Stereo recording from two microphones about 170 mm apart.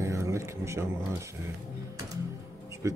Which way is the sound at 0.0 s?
15° right (ahead or behind).